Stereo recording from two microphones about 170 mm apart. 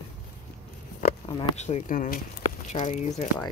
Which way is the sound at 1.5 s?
40° left (ahead or behind).